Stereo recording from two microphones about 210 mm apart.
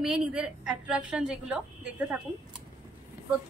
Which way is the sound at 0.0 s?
5° right (ahead or behind).